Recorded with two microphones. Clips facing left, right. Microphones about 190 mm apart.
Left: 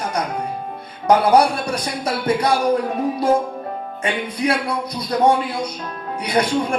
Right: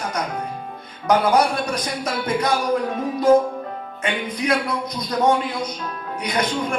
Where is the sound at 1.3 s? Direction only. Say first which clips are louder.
Left 3 dB; 30° left (ahead or behind).